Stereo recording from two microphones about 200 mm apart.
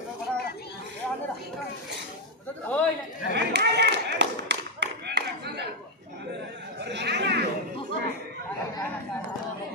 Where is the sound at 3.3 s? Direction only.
55° right (ahead or behind).